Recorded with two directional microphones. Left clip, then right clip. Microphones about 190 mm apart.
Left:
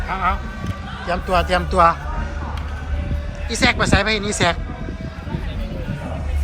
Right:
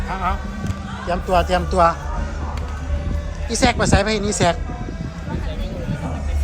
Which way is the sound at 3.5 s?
15° right (ahead or behind).